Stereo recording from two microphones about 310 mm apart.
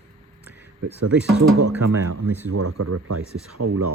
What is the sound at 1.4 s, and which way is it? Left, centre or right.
Speech, right.